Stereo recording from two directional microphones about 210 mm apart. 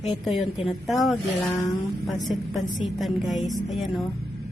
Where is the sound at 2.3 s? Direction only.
Centre (ahead or behind).